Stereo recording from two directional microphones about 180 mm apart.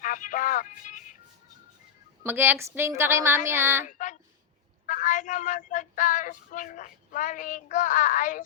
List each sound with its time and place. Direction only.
0.0 s child singing: 45° left (ahead or behind)
2.2 s a woman's voice: 10° right (ahead or behind)
3.8 s child singing: 45° left (ahead or behind)